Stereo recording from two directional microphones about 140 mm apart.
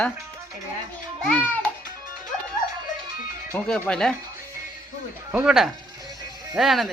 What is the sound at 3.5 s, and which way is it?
Speech, 5° left (ahead or behind).